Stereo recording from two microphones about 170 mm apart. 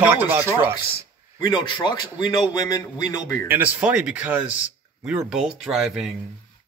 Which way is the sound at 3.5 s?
10° right (ahead or behind).